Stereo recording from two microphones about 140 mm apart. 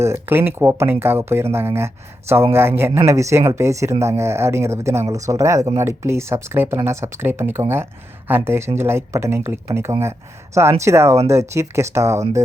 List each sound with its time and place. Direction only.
0.0 s speech: 15° right (ahead or behind)